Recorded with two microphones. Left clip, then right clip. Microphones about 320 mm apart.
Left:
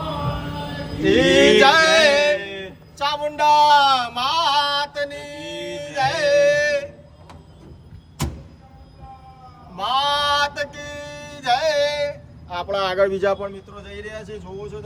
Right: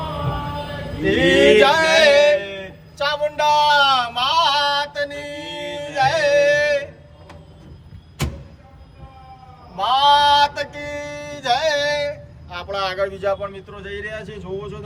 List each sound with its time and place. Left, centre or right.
1.0 s music: centre
3.0 s a sound: centre
9.7 s music: centre; by 13.5 s left